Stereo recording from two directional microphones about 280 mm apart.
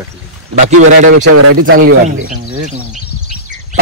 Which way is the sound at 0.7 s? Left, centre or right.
Right.